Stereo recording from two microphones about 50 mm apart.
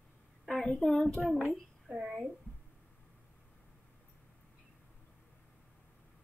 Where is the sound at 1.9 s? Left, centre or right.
Right.